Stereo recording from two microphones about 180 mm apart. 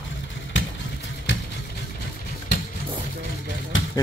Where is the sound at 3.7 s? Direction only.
90° left.